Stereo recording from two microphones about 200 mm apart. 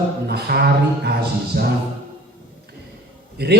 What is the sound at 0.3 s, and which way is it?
Music, 55° right (ahead or behind).